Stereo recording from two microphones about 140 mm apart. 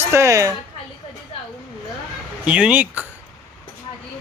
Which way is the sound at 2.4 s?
10° right (ahead or behind).